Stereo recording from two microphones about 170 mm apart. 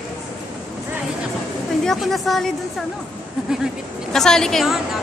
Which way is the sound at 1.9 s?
Centre (ahead or behind).